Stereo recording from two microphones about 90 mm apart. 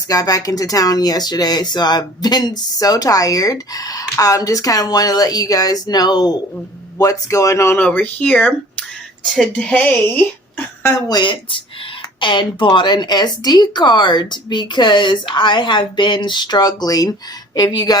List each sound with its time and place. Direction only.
0.1 s speech: 40° left (ahead or behind)
7.0 s speech: 40° left (ahead or behind)
7.8 s speech: 15° left (ahead or behind)
9.6 s speech: 10° left (ahead or behind)
11.1 s speech: 60° left (ahead or behind)